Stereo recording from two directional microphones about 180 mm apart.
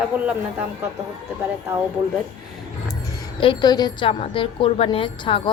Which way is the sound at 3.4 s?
25° left (ahead or behind).